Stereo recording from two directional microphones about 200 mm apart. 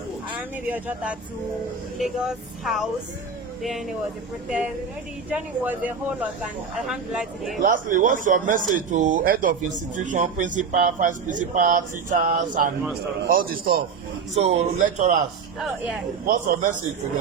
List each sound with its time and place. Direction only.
0.3 s speech: 5° right (ahead or behind)
4.4 s speech: 5° right (ahead or behind)
7.6 s a man's voice: 40° right (ahead or behind)
14.3 s speech: 35° right (ahead or behind)
16.2 s speech: 35° right (ahead or behind)